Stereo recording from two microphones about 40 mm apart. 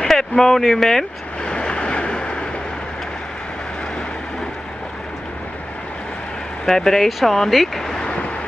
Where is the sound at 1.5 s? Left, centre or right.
Left.